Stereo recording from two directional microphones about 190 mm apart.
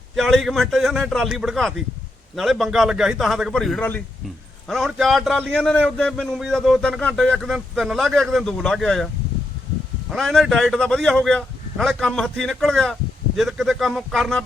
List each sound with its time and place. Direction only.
0.2 s a man's voice: centre (ahead or behind)
10.1 s a man's voice: centre (ahead or behind)